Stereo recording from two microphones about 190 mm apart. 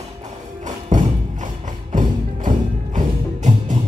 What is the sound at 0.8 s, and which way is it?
Music, 40° right (ahead or behind).